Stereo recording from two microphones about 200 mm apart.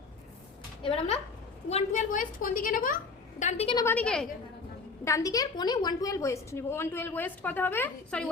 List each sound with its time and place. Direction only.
0.8 s a woman's voice: 30° left (ahead or behind)
3.4 s a woman's voice: 30° left (ahead or behind)
3.8 s a woman's voice: 10° left (ahead or behind)
5.0 s a woman's voice: 15° left (ahead or behind)